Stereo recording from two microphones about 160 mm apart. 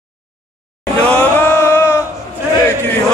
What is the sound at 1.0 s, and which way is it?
Chant, 5° left (ahead or behind).